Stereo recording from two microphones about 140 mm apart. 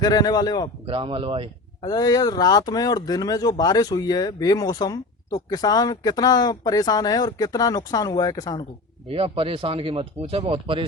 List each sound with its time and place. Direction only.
0.0 s speech: 30° left (ahead or behind)
0.9 s speech: 40° right (ahead or behind)
1.8 s speech: 25° left (ahead or behind)
9.0 s speech: 40° right (ahead or behind)